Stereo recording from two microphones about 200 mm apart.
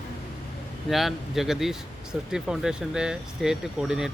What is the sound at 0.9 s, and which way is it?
Speech, centre (ahead or behind).